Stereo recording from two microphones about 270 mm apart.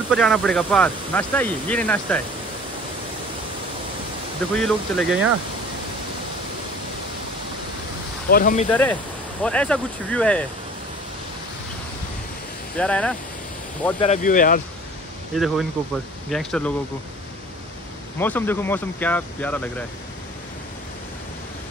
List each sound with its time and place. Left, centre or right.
0.1 s speech: centre
4.6 s speech: centre
8.3 s speech: left
8.6 s speech: centre
12.7 s speech: centre
14.0 s speech: left
15.3 s speech: centre
18.2 s speech: centre